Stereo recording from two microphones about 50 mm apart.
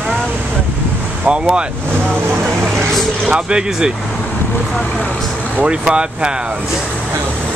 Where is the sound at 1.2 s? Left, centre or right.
Centre.